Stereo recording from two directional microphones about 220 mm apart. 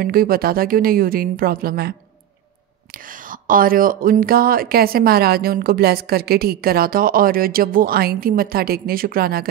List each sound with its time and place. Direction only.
0.0 s a woman's voice: 40° right (ahead or behind)